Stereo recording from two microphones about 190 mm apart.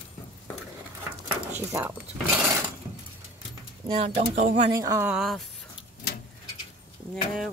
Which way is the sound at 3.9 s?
30° right (ahead or behind).